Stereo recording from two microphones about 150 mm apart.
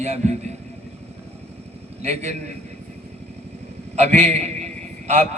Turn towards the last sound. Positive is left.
turn(degrees=-50)  # may be behind; listen again after turning